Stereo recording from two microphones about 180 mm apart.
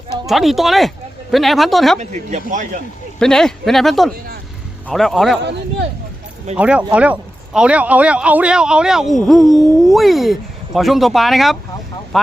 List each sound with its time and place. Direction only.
0.3 s speech: centre (ahead or behind)
2.0 s speech: 40° right (ahead or behind)
3.2 s speech: 5° left (ahead or behind)
5.4 s speech: 70° right (ahead or behind)
6.6 s speech: 5° right (ahead or behind)
9.4 s a sound: 20° right (ahead or behind)
9.8 s speech: centre (ahead or behind)